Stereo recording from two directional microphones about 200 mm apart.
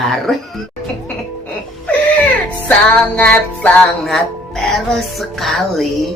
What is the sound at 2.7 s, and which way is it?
Music, 5° left (ahead or behind).